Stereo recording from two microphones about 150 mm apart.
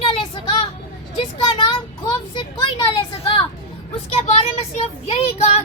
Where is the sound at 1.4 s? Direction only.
35° left (ahead or behind).